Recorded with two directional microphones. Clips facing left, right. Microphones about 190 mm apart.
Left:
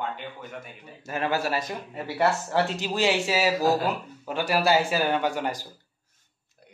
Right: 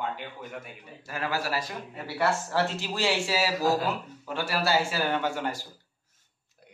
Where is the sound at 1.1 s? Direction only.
25° left (ahead or behind).